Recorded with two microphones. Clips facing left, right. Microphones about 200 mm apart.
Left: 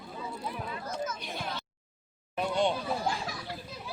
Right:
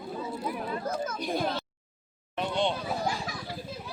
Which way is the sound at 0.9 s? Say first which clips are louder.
Right 2 dB; 55° right (ahead or behind).